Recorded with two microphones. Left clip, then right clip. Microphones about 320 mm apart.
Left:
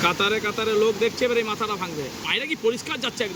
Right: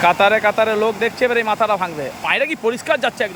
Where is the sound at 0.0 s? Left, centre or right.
Centre.